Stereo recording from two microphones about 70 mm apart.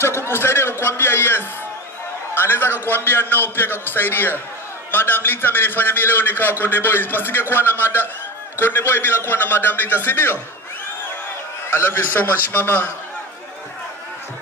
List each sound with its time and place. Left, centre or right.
0.0 s a sound: left
2.3 s a man's voice: left
11.7 s a man's voice: left